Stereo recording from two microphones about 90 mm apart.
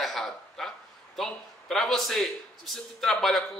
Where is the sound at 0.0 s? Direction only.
5° left (ahead or behind).